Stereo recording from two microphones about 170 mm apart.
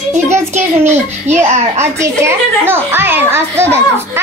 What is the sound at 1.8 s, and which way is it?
A child's voice, 15° right (ahead or behind).